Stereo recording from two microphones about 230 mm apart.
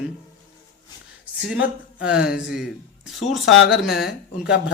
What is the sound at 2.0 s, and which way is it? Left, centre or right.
Speech, centre.